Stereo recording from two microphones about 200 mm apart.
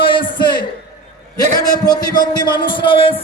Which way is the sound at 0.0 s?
25° left (ahead or behind).